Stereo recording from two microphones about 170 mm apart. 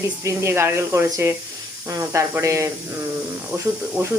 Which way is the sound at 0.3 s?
15° right (ahead or behind).